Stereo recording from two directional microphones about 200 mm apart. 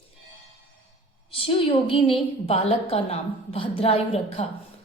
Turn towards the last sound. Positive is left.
turn(degrees=30)  # may be behind; listen again after turning